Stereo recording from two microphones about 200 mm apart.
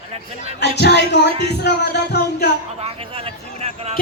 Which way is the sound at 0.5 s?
55° left (ahead or behind).